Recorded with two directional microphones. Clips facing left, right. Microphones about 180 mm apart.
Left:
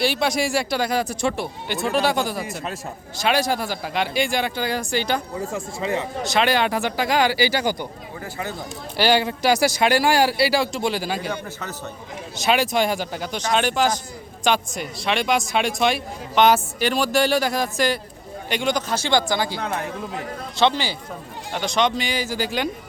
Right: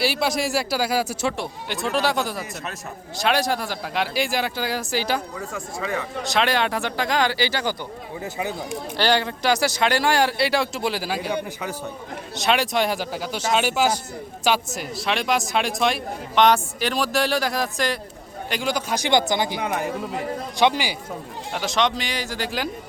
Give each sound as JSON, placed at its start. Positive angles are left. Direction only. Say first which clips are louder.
{"t": 0.0, "sound": "speech", "louder": "left 1 dB", "side_deg": -5}
{"t": 5.4, "sound": "speech", "louder": "left 3 dB", "side_deg": 25}
{"t": 6.2, "sound": "speech", "louder": "left 2 dB", "side_deg": 0}
{"t": 8.2, "sound": "a man's voice", "louder": "right 2 dB", "side_deg": -15}
{"t": 9.0, "sound": "speech", "louder": "left 3 dB", "side_deg": 5}
{"t": 12.4, "sound": "a man's voice", "louder": "left 1 dB", "side_deg": 0}
{"t": 21.5, "sound": "speech", "louder": "left 1 dB", "side_deg": 0}